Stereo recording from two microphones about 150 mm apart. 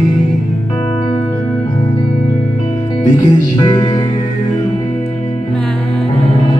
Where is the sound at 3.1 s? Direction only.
30° left (ahead or behind).